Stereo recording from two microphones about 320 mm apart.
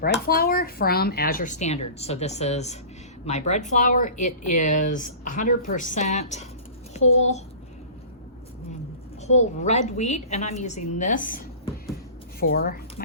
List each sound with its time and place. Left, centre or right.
0.0 s speech: left
9.2 s speech: left